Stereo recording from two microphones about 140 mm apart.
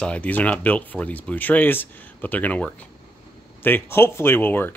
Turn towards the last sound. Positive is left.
turn(degrees=15)  # may be behind; listen again after turning